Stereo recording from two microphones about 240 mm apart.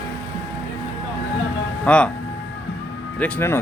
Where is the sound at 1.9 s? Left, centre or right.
Centre.